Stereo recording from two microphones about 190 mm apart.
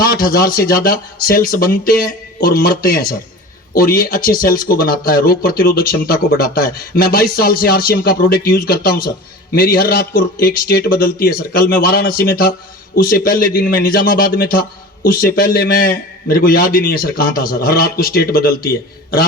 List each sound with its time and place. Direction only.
0.0 s speech: 50° left (ahead or behind)